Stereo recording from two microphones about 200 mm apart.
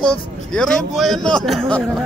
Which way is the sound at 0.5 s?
Centre (ahead or behind).